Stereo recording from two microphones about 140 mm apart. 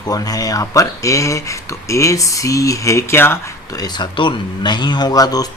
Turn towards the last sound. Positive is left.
turn(degrees=25)  # may be behind; listen again after turning